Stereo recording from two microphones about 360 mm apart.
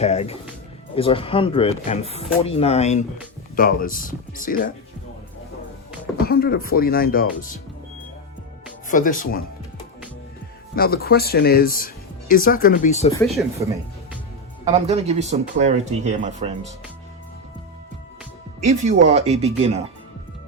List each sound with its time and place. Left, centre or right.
0.0 s speech: centre
6.1 s speech: left
8.9 s speech: left
10.8 s speech: left
13.2 s speech: centre
14.6 s speech: centre
18.6 s speech: centre